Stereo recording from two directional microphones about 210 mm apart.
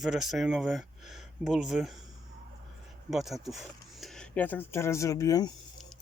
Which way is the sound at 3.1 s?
Centre (ahead or behind).